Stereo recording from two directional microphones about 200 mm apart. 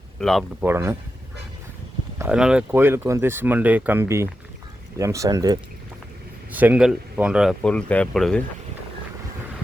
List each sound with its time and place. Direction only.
0.2 s speech: centre (ahead or behind)
0.6 s speech: 10° right (ahead or behind)
2.1 s speech: 5° right (ahead or behind)